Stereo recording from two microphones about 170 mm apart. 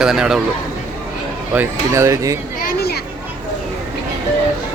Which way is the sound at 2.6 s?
65° left (ahead or behind).